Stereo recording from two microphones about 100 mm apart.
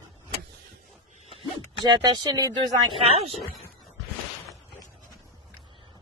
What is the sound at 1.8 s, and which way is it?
Speech, 45° right (ahead or behind).